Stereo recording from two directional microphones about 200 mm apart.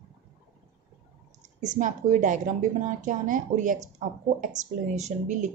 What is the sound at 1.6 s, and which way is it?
A woman's voice, 40° right (ahead or behind).